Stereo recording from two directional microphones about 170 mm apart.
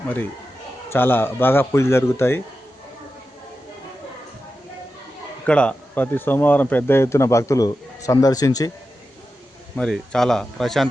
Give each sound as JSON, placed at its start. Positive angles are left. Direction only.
{"t": 0.9, "sound": "speech", "side_deg": 10}
{"t": 5.5, "sound": "speech", "side_deg": 5}
{"t": 9.7, "sound": "speech", "side_deg": 5}